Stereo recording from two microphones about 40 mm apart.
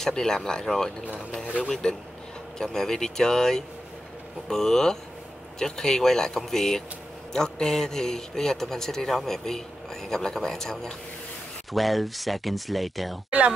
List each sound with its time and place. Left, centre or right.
0.1 s a man's voice: centre
1.4 s speech: right
1.7 s a man's voice: centre
11.7 s speech: centre